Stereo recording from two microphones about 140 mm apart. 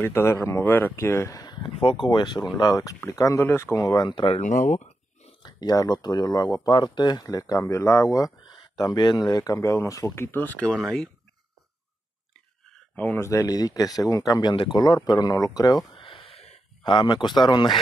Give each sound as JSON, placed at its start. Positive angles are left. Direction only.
{"t": 0.0, "sound": "speech", "side_deg": 15}
{"t": 4.4, "sound": "a sound", "side_deg": 60}
{"t": 5.4, "sound": "speech", "side_deg": 30}
{"t": 12.9, "sound": "speech", "side_deg": 10}
{"t": 14.5, "sound": "speech", "side_deg": 35}
{"t": 15.0, "sound": "a sound", "side_deg": 25}
{"t": 16.8, "sound": "speech", "side_deg": 35}